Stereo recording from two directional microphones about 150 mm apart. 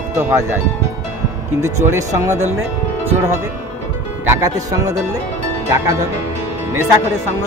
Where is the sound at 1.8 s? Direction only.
20° right (ahead or behind).